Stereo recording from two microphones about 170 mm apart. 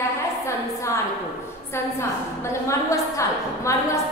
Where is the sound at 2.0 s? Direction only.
15° left (ahead or behind).